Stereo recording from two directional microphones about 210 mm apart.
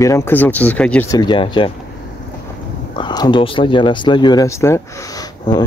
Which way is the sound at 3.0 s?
20° left (ahead or behind).